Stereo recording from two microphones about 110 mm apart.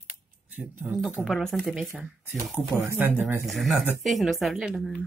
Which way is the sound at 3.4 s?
Centre (ahead or behind).